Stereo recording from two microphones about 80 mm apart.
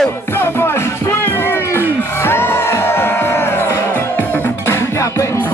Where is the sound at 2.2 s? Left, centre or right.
Left.